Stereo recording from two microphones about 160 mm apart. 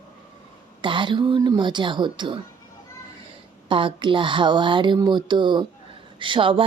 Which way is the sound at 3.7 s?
30° right (ahead or behind).